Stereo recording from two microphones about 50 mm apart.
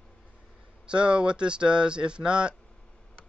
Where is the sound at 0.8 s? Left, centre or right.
Centre.